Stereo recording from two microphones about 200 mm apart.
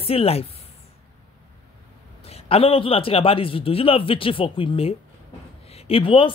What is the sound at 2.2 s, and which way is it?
A man's voice, 30° left (ahead or behind).